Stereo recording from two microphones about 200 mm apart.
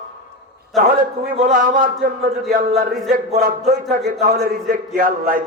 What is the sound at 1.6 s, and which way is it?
Speech, 40° right (ahead or behind).